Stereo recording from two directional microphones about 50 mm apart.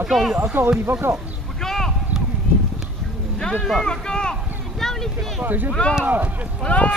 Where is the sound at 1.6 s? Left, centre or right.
Centre.